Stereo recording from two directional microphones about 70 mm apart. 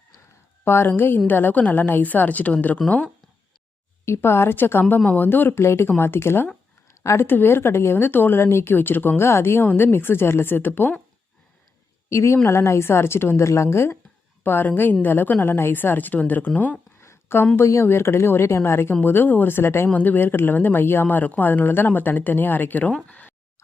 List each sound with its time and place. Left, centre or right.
0.6 s speech: left
4.0 s speech: left
7.3 s speech: left
12.0 s speech: left
14.4 s speech: left
17.0 s a sound: left
17.6 s speech: left
19.9 s speech: left